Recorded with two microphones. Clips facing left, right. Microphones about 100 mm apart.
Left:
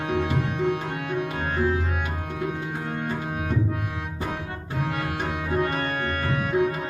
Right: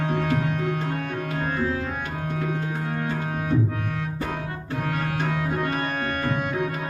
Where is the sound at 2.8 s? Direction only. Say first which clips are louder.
Right 1 dB; 5° left (ahead or behind).